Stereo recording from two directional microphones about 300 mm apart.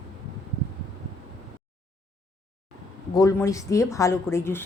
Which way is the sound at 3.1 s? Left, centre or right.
Centre.